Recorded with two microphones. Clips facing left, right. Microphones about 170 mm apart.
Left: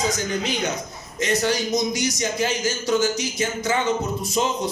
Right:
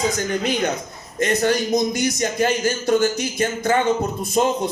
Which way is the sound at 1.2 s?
55° right (ahead or behind).